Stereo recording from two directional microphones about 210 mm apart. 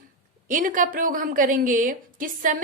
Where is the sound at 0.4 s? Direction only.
40° right (ahead or behind).